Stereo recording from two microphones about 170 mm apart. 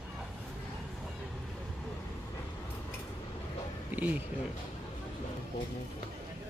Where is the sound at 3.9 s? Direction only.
10° right (ahead or behind).